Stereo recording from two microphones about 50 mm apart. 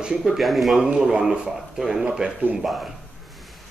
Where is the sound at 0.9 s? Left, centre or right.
Centre.